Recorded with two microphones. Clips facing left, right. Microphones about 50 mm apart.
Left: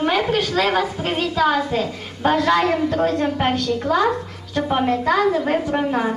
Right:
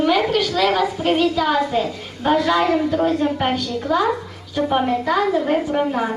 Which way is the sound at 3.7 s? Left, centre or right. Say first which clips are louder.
Even; left.